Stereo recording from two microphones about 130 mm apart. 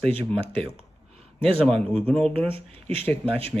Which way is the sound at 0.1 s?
45° right (ahead or behind).